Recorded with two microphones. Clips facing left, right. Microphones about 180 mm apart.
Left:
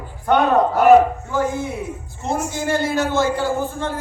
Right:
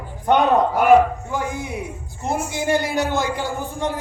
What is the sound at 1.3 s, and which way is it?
A man's voice, 15° right (ahead or behind).